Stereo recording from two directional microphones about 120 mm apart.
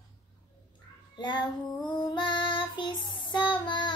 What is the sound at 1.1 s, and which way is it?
Child singing, 35° left (ahead or behind).